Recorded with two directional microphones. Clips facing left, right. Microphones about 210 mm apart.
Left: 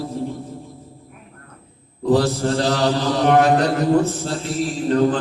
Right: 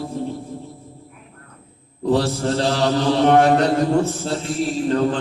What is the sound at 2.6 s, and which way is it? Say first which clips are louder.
Mantra: right 1 dB; 30° right (ahead or behind).